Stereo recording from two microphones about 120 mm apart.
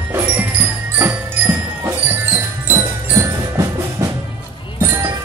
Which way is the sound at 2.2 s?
20° right (ahead or behind).